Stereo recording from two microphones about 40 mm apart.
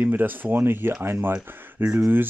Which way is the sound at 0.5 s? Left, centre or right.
Right.